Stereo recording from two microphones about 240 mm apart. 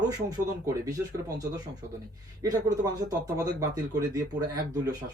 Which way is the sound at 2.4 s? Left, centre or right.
Centre.